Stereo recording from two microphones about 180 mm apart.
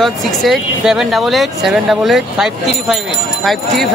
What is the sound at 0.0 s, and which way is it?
Speech, centre (ahead or behind).